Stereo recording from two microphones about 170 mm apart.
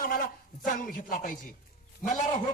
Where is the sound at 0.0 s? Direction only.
55° left (ahead or behind).